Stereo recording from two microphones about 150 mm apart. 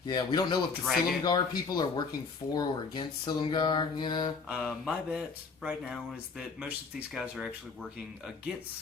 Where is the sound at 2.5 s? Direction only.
30° left (ahead or behind).